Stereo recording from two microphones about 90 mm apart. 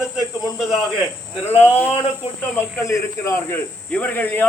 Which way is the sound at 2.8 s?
35° left (ahead or behind).